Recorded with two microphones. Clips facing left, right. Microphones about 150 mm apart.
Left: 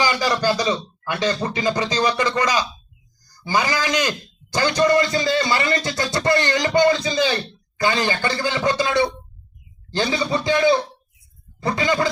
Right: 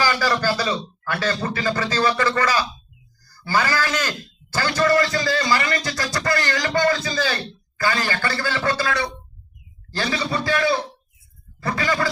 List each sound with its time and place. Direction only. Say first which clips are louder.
0.0 s a man's voice: left 1 dB; 15° left (ahead or behind)